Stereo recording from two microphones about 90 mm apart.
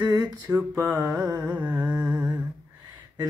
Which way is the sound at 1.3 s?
15° right (ahead or behind).